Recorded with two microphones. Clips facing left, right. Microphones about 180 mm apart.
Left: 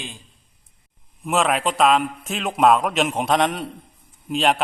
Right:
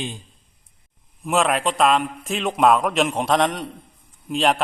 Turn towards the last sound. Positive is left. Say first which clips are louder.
# even
turn(degrees=0)  # may be behind; listen again after turning